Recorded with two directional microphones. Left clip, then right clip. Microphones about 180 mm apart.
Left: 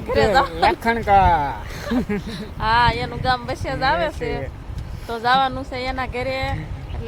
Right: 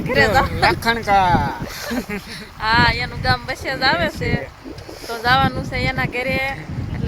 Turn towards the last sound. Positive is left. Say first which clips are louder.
# right 3 dB
turn(degrees=-5)  # may be behind; listen again after turning